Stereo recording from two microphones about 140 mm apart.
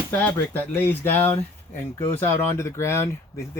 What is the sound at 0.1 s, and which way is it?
Speech, 15° left (ahead or behind).